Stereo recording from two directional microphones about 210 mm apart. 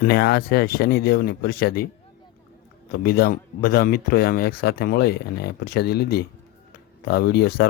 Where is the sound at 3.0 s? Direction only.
45° left (ahead or behind).